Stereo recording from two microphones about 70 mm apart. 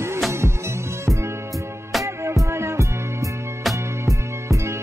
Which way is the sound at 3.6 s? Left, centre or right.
Centre.